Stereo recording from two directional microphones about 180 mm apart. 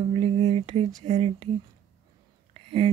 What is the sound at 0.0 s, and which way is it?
Whispering, 35° right (ahead or behind).